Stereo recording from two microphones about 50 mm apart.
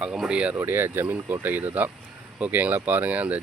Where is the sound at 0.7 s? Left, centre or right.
Right.